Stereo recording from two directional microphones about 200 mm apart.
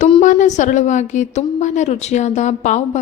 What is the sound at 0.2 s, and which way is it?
Speech, 40° left (ahead or behind).